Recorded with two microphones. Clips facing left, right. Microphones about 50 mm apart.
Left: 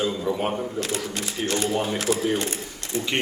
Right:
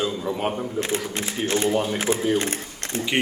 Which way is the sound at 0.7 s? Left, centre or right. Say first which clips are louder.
Right 2 dB; right.